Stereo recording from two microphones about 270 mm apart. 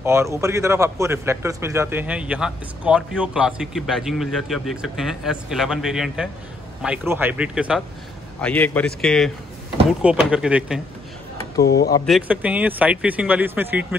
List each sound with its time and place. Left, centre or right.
0.0 s speech: centre
11.6 s speech: left
12.1 s speech: centre